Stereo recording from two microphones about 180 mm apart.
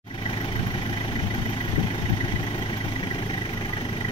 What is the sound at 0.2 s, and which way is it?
Vehicle, 30° left (ahead or behind).